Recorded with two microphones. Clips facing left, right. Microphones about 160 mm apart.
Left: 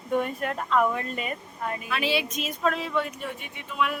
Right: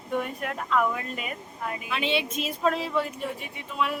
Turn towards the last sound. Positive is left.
turn(degrees=-30)  # may be behind; listen again after turning